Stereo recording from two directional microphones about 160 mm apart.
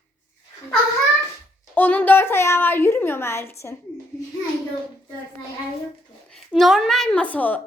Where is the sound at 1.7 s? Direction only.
10° left (ahead or behind).